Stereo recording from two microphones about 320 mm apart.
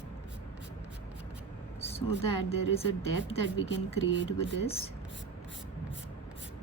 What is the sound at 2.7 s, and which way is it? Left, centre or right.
Speech, centre.